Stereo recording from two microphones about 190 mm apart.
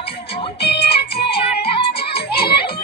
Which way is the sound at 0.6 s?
60° left (ahead or behind).